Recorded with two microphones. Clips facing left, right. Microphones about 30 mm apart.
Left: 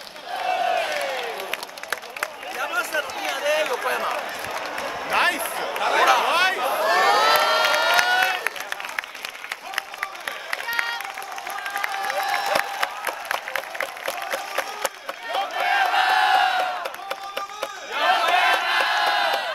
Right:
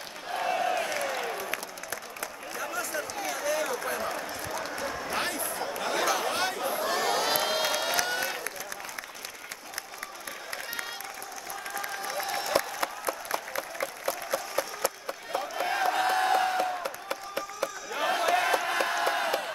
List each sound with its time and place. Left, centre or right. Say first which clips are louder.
0.3 s crowd: left 5 dB; left
1.9 s run: left 11 dB; left
5.0 s a sound: left 13 dB; left
5.8 s crowd: left 11 dB; left
10.5 s a sound: left 11 dB; left
11.7 s applause: left 8 dB; left
15.3 s crowd: left 8 dB; left
17.1 s applause: left 4 dB; left
17.9 s crowd: left 7 dB; left